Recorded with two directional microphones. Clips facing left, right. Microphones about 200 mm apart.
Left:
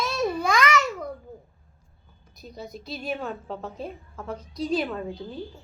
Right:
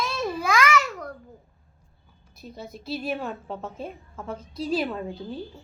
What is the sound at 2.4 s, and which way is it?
A woman's voice, centre (ahead or behind).